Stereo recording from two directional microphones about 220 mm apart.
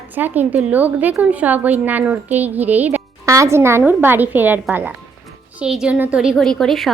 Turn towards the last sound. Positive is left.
turn(degrees=0)  # may be behind; listen again after turning